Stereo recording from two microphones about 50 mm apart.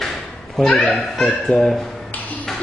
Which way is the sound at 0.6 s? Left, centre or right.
Centre.